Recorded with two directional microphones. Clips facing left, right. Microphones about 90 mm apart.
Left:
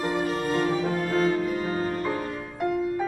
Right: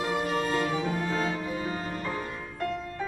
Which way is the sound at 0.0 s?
35° left (ahead or behind).